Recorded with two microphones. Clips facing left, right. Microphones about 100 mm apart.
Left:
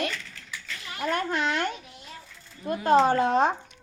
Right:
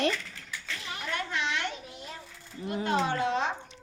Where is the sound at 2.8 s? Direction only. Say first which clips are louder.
Left 8 dB; 40° left (ahead or behind).